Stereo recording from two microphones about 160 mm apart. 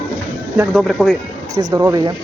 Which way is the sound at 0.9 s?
Centre (ahead or behind).